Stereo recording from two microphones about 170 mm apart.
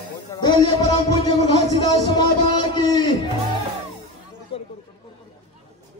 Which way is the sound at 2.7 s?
25° left (ahead or behind).